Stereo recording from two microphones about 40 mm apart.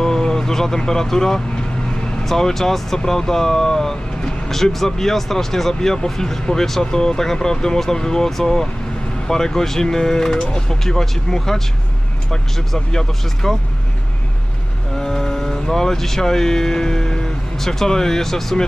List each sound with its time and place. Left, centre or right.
0.0 s vehicle: centre
0.7 s speech: centre
10.4 s speech: left
10.8 s speech: centre
15.0 s speech: centre